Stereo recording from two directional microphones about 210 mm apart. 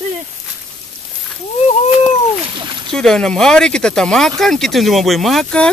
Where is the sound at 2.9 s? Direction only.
5° left (ahead or behind).